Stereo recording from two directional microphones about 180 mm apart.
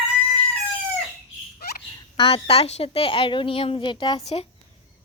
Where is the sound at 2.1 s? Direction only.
35° left (ahead or behind).